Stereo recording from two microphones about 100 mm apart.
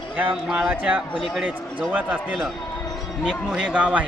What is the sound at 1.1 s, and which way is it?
Speech, centre (ahead or behind).